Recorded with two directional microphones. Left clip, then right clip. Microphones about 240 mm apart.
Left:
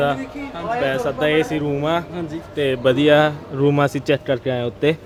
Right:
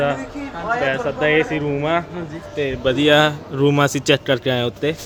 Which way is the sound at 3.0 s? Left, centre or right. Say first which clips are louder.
Right 2 dB; centre.